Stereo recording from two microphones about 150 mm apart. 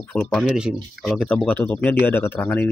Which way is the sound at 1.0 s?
5° left (ahead or behind).